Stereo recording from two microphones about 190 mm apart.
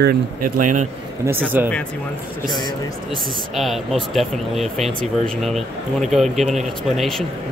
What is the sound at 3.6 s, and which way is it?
Speech, centre (ahead or behind).